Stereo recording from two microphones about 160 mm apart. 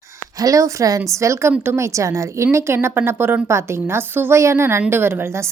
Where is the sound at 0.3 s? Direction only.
20° right (ahead or behind).